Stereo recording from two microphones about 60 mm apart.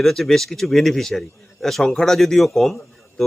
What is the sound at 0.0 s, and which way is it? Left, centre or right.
Speech, centre.